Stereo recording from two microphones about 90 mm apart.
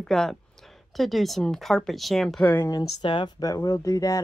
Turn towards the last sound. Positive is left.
turn(degrees=40)  # may be behind; listen again after turning